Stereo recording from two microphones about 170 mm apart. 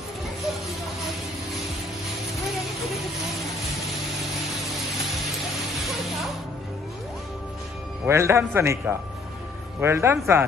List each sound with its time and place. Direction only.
8.1 s a man's voice: 15° right (ahead or behind)